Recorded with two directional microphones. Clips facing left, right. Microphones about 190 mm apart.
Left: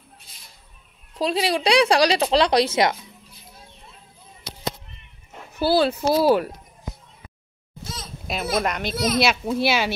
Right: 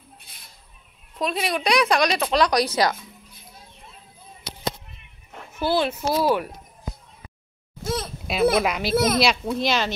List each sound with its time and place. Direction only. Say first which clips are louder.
0.3 s music: right 1 dB; 60° right (ahead or behind)
1.1 s speech: left 3 dB; 30° left (ahead or behind)
5.6 s speech: left 3 dB; 35° left (ahead or behind)
7.8 s a sound: right 10 dB; 60° right (ahead or behind)
8.3 s a child's voice: right 4 dB; centre (ahead or behind)
8.9 s speech: right 4 dB; 55° right (ahead or behind)
9.2 s a child's voice: left 1 dB; 5° left (ahead or behind)